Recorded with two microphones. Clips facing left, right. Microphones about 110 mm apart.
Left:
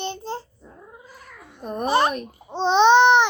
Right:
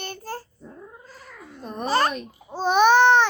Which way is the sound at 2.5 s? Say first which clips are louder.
Left 2 dB; 25° left (ahead or behind).